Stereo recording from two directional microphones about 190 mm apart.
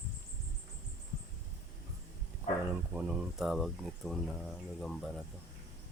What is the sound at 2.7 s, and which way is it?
Speech, 5° right (ahead or behind).